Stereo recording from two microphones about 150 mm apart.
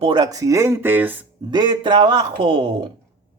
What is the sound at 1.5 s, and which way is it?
Speech, 30° right (ahead or behind).